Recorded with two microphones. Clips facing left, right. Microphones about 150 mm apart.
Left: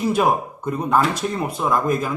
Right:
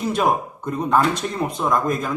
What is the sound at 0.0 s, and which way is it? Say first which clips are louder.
Speech: left 1 dB; 5° left (ahead or behind).